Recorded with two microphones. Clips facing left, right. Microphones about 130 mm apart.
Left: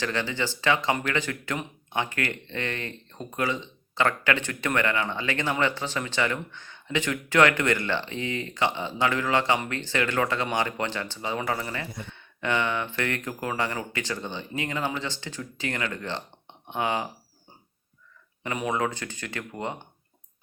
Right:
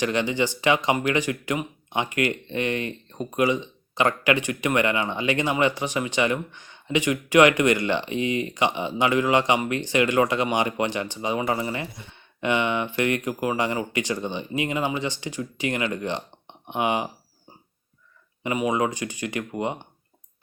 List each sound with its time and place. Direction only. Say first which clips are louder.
0.0 s speech: right 5 dB; 15° right (ahead or behind)
18.4 s speech: right 4 dB; 10° right (ahead or behind)